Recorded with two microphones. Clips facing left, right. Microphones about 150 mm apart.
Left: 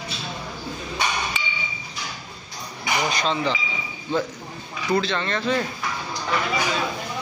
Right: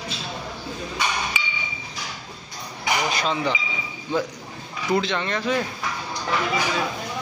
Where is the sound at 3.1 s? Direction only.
5° right (ahead or behind).